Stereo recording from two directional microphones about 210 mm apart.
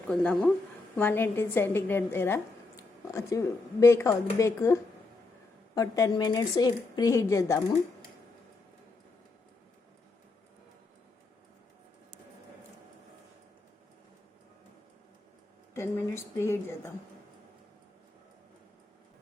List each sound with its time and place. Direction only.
0.1 s a woman's voice: 5° left (ahead or behind)
15.7 s a woman's voice: 10° left (ahead or behind)